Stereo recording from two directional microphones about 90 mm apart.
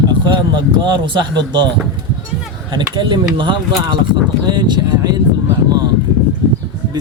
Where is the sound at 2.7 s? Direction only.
60° right (ahead or behind).